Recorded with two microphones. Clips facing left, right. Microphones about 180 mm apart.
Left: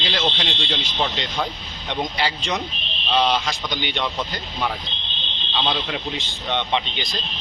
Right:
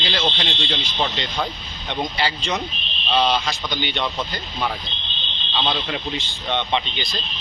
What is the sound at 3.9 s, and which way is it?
A man's voice, centre (ahead or behind).